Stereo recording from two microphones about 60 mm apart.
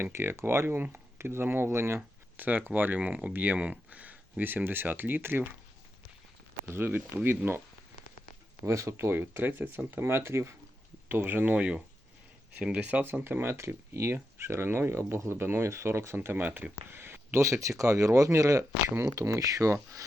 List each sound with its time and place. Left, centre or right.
0.0 s speech: right
2.0 s speech: right
6.7 s speech: right
8.6 s speech: right
11.1 s speech: right
11.5 s speech: right
13.2 s speech: right
17.4 s speech: right
18.9 s speech: right
19.3 s speech: right
19.7 s speech: right